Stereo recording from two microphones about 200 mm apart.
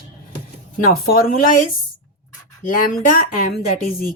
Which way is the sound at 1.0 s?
45° left (ahead or behind).